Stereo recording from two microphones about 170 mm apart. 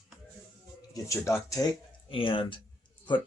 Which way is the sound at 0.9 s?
20° left (ahead or behind).